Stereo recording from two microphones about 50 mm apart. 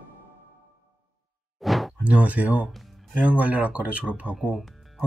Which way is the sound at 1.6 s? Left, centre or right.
Centre.